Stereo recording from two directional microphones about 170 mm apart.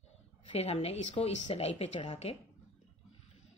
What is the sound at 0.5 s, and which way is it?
A woman's voice, 40° left (ahead or behind).